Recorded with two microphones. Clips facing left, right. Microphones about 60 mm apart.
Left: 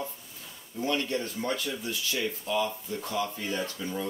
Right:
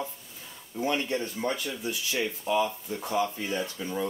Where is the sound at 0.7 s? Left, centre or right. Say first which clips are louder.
Right 1 dB; right.